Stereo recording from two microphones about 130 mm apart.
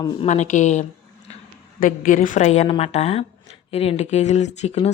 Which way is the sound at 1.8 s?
90° left.